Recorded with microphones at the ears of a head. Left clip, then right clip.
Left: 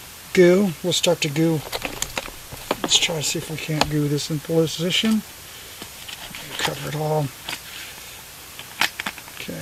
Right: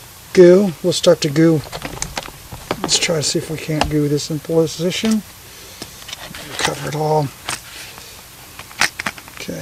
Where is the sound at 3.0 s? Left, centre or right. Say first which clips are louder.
Right 6 dB; right.